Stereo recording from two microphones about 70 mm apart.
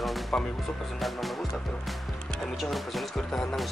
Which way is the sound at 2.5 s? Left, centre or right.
Centre.